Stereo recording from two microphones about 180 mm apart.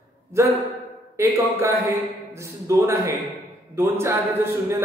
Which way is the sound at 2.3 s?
15° right (ahead or behind).